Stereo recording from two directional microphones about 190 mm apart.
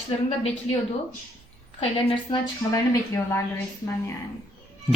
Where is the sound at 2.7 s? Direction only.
15° left (ahead or behind).